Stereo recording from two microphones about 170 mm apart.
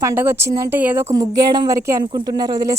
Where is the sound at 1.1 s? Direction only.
25° right (ahead or behind).